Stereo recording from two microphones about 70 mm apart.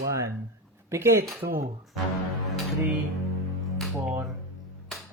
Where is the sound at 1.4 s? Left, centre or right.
Right.